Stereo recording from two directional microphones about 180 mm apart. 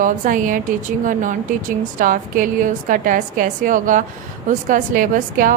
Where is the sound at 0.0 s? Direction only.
45° right (ahead or behind).